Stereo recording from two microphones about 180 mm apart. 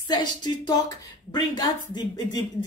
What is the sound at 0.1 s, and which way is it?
Speech, 25° left (ahead or behind).